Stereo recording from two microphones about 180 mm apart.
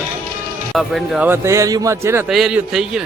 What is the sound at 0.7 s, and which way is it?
Speech, centre (ahead or behind).